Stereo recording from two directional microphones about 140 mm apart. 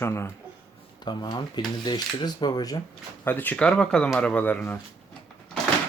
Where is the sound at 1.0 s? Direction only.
30° left (ahead or behind).